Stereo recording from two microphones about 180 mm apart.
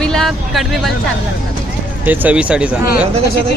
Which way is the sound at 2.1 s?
10° right (ahead or behind).